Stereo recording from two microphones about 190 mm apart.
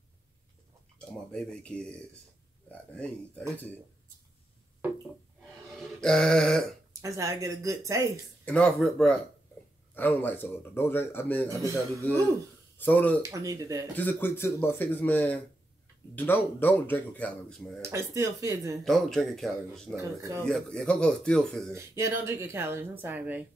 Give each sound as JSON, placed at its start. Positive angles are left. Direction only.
{"t": 0.9, "sound": "speech", "side_deg": 5}
{"t": 5.7, "sound": "a sound", "side_deg": 0}
{"t": 6.9, "sound": "a woman's voice", "side_deg": -15}
{"t": 8.5, "sound": "speech", "side_deg": 5}
{"t": 13.2, "sound": "a woman's voice", "side_deg": -15}
{"t": 13.9, "sound": "speech", "side_deg": 10}
{"t": 17.8, "sound": "a woman's voice", "side_deg": -15}
{"t": 18.9, "sound": "speech", "side_deg": 0}
{"t": 20.0, "sound": "a woman's voice", "side_deg": -15}
{"t": 20.4, "sound": "speech", "side_deg": 5}
{"t": 21.7, "sound": "a woman's voice", "side_deg": -15}